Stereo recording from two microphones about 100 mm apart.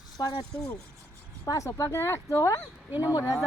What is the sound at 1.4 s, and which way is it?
Speech, 35° left (ahead or behind).